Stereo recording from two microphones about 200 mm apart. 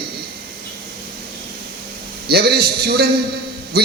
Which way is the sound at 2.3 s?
50° right (ahead or behind).